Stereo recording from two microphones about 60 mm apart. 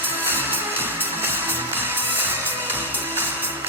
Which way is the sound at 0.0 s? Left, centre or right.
Right.